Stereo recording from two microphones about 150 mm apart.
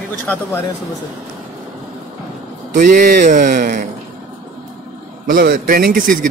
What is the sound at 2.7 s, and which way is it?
Speech, 60° right (ahead or behind).